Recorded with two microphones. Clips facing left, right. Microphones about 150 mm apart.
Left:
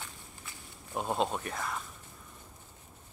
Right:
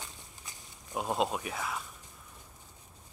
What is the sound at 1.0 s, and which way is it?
Speech, centre (ahead or behind).